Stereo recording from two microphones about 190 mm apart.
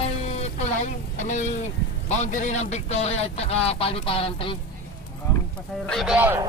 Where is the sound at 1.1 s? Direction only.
40° left (ahead or behind).